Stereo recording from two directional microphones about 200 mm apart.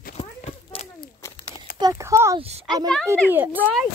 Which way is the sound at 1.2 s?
20° left (ahead or behind).